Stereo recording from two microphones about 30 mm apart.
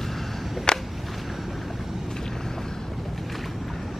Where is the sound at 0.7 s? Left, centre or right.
Left.